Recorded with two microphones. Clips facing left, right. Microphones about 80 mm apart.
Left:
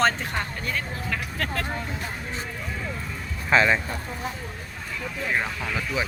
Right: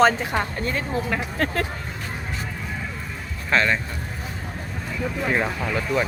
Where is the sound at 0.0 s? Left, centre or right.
Centre.